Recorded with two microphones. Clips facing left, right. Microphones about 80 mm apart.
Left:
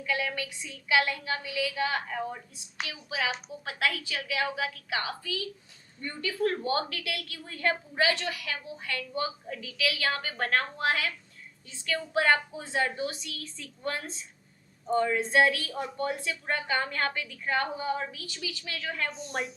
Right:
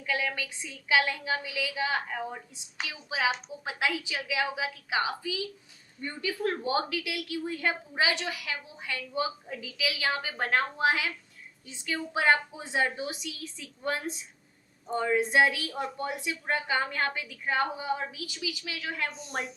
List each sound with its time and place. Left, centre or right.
0.0 s a woman's voice: right
19.1 s a woman's voice: centre